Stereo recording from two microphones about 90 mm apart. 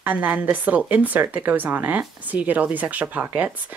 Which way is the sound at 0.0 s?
20° right (ahead or behind).